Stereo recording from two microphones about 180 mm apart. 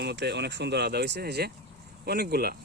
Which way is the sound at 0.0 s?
65° right (ahead or behind).